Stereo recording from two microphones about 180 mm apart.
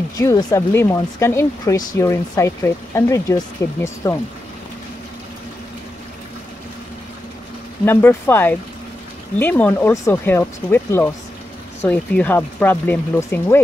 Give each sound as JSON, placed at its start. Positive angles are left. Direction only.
{"t": 0.2, "sound": "speech", "side_deg": 20}
{"t": 7.8, "sound": "speech", "side_deg": 10}